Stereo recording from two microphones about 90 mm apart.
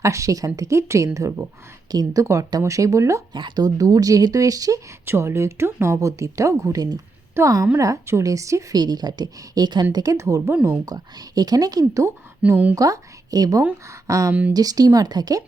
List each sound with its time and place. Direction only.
0.0 s speech: 35° right (ahead or behind)
1.9 s speech: 45° right (ahead or behind)
2.2 s speech: 35° right (ahead or behind)
3.3 s speech: 55° right (ahead or behind); by 8.6 s 35° right (ahead or behind)
8.7 s speech: 50° right (ahead or behind)
10.5 s speech: 20° right (ahead or behind)
10.8 s speech: 45° right (ahead or behind)